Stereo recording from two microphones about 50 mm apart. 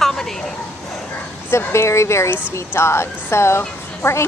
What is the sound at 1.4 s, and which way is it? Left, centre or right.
A woman's voice, left.